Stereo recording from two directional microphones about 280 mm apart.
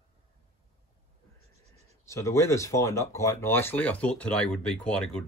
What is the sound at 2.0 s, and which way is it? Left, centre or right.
Speech, centre.